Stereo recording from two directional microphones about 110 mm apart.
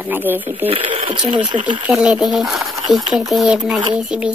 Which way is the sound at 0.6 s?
60° right (ahead or behind).